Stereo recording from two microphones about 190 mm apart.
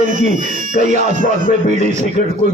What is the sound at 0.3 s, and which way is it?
Speech, 40° right (ahead or behind).